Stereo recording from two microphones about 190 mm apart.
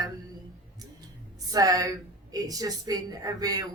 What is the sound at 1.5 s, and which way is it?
A woman's voice, 20° right (ahead or behind).